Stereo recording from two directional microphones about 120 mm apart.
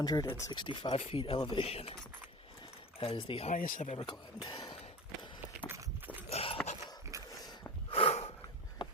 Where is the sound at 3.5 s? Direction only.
80° left.